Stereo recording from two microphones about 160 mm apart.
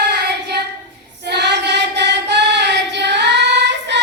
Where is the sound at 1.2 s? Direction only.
90° right.